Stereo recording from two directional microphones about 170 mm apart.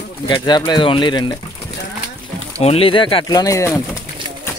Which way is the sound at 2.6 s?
35° left (ahead or behind).